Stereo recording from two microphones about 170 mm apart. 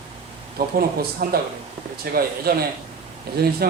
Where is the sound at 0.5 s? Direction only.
60° right (ahead or behind).